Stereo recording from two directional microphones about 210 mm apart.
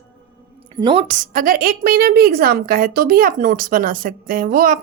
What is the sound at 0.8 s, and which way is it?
Speech, 20° right (ahead or behind).